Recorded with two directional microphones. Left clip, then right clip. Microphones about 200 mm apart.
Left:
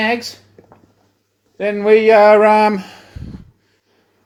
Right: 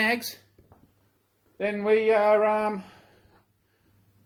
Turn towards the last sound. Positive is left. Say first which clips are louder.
# left 11 dB
turn(degrees=35)  # may be behind; listen again after turning